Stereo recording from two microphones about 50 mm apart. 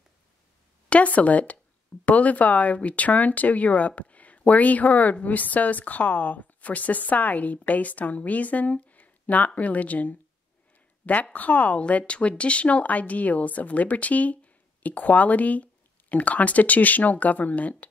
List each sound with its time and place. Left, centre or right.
0.8 s a woman's voice: left
11.3 s a woman's voice: left